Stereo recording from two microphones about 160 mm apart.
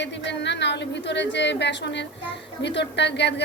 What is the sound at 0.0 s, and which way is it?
A woman's voice, 90° left.